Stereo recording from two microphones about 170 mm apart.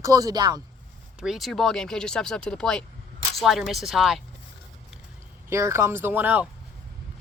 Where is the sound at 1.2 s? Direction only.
Centre (ahead or behind).